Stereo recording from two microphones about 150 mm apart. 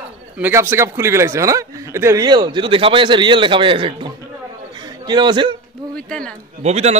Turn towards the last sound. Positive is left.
turn(degrees=-45)  # may be behind; listen again after turning